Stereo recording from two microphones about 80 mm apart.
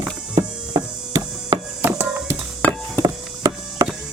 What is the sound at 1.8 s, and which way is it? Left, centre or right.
Music, right.